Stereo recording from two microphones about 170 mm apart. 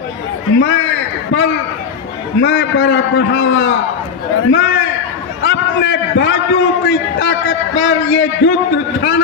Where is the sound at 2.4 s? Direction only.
90° left.